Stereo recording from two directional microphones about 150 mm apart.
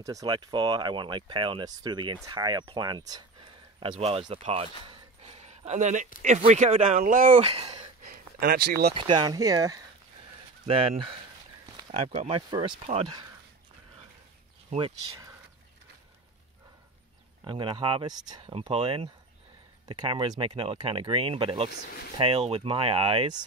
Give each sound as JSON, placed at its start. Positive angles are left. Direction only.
{"t": 0.0, "sound": "speech", "side_deg": -25}
{"t": 4.0, "sound": "speech", "side_deg": -40}
{"t": 4.8, "sound": "a sound", "side_deg": -45}
{"t": 6.2, "sound": "speech", "side_deg": -50}
{"t": 7.3, "sound": "speech", "side_deg": -40}
{"t": 8.4, "sound": "speech", "side_deg": -90}
{"t": 8.9, "sound": "speech", "side_deg": -35}
{"t": 10.7, "sound": "speech", "side_deg": -40}
{"t": 17.5, "sound": "speech", "side_deg": -35}
{"t": 21.6, "sound": "speech", "side_deg": 90}
{"t": 22.2, "sound": "speech", "side_deg": -40}